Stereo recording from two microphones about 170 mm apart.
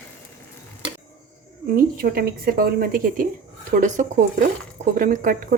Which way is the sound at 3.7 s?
45° right (ahead or behind).